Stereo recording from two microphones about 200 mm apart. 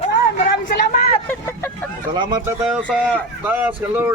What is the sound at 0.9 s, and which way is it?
Speech, 30° left (ahead or behind).